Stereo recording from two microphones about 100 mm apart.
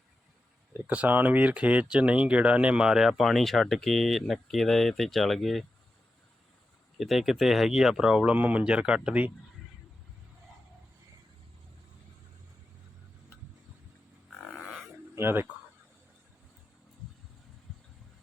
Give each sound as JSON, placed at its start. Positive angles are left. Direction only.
{"t": 0.7, "sound": "speech", "side_deg": -15}
{"t": 7.0, "sound": "speech", "side_deg": -5}
{"t": 14.4, "sound": "a sound", "side_deg": 0}
{"t": 15.1, "sound": "speech", "side_deg": -20}